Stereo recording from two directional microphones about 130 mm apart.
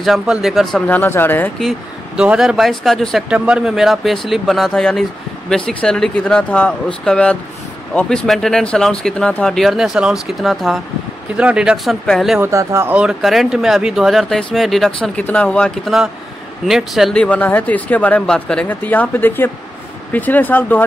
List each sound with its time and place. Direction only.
0.0 s speech: centre (ahead or behind)
0.8 s speech: 15° left (ahead or behind)
1.6 s speech: 5° right (ahead or behind)
12.4 s speech: 20° right (ahead or behind)
12.9 s speech: 5° right (ahead or behind)
17.2 s speech: 10° left (ahead or behind)